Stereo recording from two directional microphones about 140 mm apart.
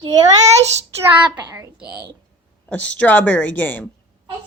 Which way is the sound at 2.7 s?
10° left (ahead or behind).